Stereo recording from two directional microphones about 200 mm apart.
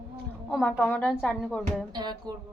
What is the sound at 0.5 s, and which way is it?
Speech, 5° left (ahead or behind).